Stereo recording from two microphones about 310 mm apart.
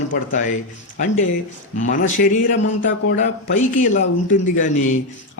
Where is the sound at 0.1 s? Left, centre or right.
Left.